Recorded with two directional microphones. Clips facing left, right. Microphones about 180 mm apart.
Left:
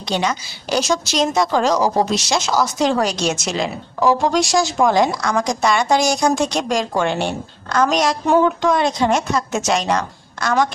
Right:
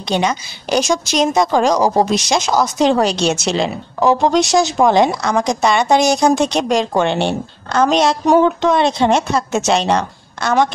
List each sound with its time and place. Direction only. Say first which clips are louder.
0.1 s a woman's voice: right 3 dB; 20° right (ahead or behind)